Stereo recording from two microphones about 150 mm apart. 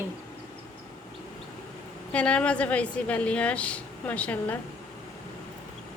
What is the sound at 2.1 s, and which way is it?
A woman's voice, 10° left (ahead or behind).